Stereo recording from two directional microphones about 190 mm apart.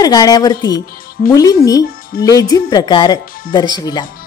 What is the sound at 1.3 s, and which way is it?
Speech, 20° left (ahead or behind).